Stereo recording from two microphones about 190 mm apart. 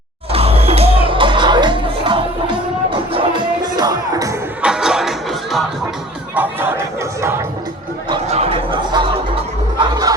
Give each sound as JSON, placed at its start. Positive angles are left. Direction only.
{"t": 0.3, "sound": "music", "side_deg": -30}
{"t": 4.6, "sound": "music", "side_deg": -5}
{"t": 6.3, "sound": "chatter", "side_deg": -10}
{"t": 8.1, "sound": "chatter", "side_deg": -30}
{"t": 9.7, "sound": "music", "side_deg": -20}